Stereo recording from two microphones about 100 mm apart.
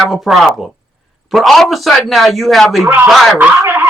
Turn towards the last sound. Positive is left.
turn(degrees=-20)  # may be behind; listen again after turning